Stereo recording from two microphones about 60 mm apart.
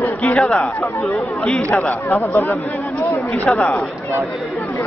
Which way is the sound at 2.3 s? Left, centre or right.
Left.